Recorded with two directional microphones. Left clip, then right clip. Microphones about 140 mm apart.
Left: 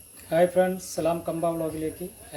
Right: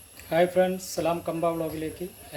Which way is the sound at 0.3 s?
10° right (ahead or behind).